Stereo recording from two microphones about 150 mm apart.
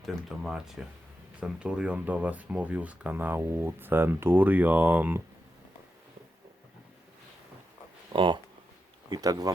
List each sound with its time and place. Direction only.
0.0 s speech: 5° right (ahead or behind)
8.1 s speech: 35° right (ahead or behind)